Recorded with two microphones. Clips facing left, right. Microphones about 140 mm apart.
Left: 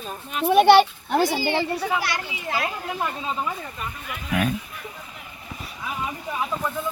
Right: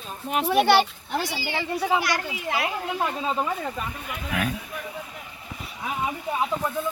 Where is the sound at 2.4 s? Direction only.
10° right (ahead or behind).